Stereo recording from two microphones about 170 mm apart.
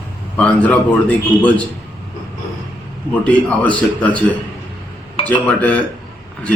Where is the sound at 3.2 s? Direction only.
5° left (ahead or behind).